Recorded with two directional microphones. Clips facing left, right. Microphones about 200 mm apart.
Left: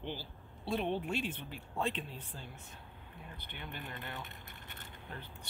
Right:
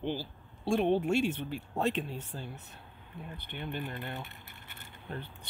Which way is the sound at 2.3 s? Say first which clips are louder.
Right 6 dB; 45° right (ahead or behind).